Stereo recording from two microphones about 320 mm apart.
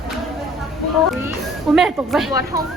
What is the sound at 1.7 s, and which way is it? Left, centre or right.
Speech, centre.